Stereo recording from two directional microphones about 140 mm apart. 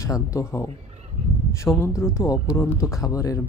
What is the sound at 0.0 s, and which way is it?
Speech, 20° left (ahead or behind).